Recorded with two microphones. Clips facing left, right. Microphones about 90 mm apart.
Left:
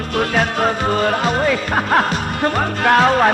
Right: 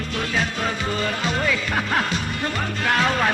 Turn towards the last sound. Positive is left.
turn(degrees=45)  # may be behind; listen again after turning